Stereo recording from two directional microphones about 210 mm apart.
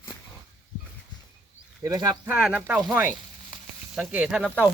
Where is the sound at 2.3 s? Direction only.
5° right (ahead or behind).